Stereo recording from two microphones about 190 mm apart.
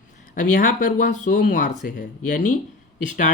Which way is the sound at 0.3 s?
45° left (ahead or behind).